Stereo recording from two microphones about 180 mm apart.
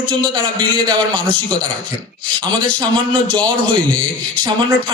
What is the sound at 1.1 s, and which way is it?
A man's voice, 25° right (ahead or behind).